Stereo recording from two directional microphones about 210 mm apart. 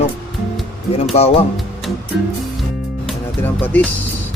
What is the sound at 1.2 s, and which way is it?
Speech, 30° left (ahead or behind).